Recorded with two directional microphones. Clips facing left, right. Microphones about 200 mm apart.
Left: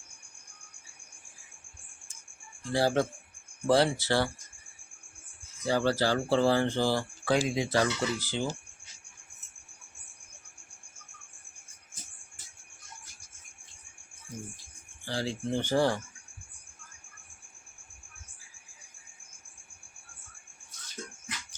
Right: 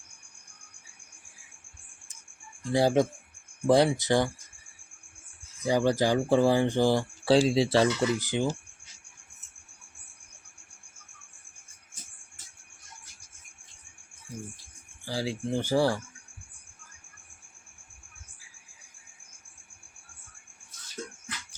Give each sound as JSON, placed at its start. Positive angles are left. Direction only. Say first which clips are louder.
{"t": 2.6, "sound": "speech", "louder": "right 3 dB", "side_deg": -20}
{"t": 5.6, "sound": "speech", "louder": "right 3 dB", "side_deg": -15}
{"t": 7.3, "sound": "speech", "louder": "right 6 dB", "side_deg": -30}
{"t": 15.0, "sound": "speech", "louder": "right 1 dB", "side_deg": -10}